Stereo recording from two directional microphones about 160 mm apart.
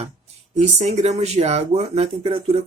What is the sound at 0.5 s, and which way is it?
Speech, 45° right (ahead or behind).